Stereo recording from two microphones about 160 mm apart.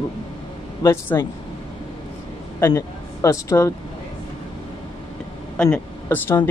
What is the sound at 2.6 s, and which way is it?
Speech, 20° left (ahead or behind).